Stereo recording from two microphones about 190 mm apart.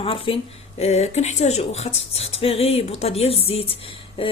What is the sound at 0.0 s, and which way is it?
Speech, 30° left (ahead or behind).